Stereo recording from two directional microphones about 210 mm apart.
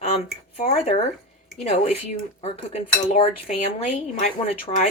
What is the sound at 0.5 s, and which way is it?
Speech, 30° left (ahead or behind).